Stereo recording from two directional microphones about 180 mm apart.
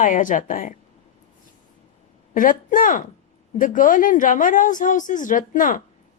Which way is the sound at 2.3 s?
45° left (ahead or behind).